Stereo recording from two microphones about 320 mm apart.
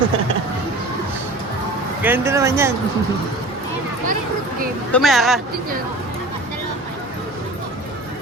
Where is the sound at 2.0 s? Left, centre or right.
Centre.